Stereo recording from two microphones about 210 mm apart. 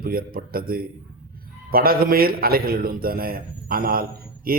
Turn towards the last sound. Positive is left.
turn(degrees=-45)  # may be behind; listen again after turning